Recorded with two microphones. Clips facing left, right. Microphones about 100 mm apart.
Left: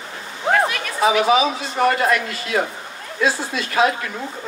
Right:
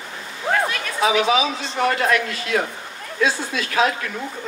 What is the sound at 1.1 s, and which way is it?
Speech, 5° left (ahead or behind).